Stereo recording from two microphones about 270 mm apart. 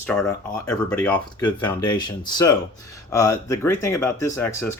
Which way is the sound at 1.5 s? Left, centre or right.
Centre.